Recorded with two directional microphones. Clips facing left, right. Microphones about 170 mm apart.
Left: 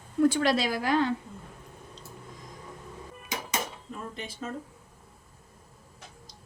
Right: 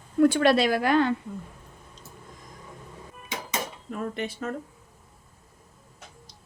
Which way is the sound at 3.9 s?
65° right (ahead or behind).